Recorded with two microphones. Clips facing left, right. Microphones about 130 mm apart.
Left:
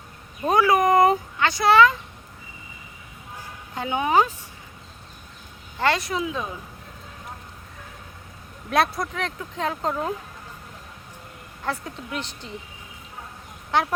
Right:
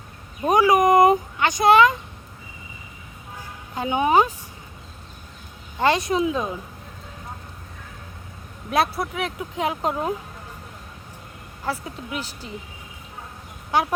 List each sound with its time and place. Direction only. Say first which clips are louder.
0.4 s speech: right 2 dB; 15° right (ahead or behind)
3.8 s speech: right 2 dB; 20° right (ahead or behind)
5.8 s speech: right 4 dB; 20° right (ahead or behind)
8.7 s speech: even; 5° right (ahead or behind)
11.6 s speech: right 1 dB; 5° right (ahead or behind)
13.7 s speech: right 1 dB; 10° right (ahead or behind)